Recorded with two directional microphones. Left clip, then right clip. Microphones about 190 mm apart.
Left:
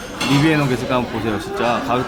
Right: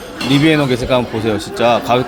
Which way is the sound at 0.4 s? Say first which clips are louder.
Right 4 dB; 25° right (ahead or behind).